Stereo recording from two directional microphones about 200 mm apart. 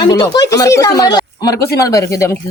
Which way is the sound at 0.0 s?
20° left (ahead or behind).